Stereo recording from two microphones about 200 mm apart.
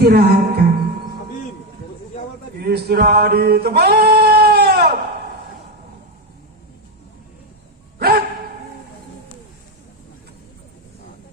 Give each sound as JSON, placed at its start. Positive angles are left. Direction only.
{"t": 0.0, "sound": "music", "side_deg": -50}
{"t": 2.6, "sound": "male singing", "side_deg": -50}
{"t": 7.9, "sound": "a sound", "side_deg": -50}